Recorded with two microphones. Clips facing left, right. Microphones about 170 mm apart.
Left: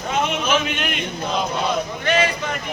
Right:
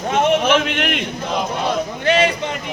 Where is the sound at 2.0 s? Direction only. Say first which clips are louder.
Right 4 dB; 30° right (ahead or behind).